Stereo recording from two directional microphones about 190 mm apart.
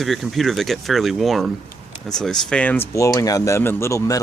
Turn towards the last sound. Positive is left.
turn(degrees=15)  # may be behind; listen again after turning